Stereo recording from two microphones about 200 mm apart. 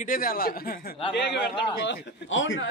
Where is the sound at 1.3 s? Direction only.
60° left (ahead or behind).